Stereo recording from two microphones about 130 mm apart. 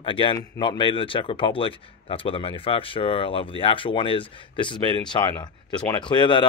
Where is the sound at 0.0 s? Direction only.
40° left (ahead or behind).